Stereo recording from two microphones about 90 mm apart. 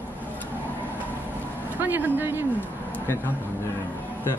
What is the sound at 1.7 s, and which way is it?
Speech, 20° right (ahead or behind).